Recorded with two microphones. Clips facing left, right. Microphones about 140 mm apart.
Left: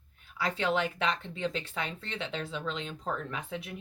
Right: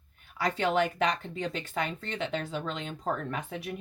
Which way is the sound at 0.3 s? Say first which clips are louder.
Right 3 dB; 40° right (ahead or behind).